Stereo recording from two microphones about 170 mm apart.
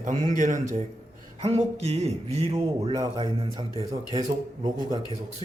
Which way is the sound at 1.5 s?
40° right (ahead or behind).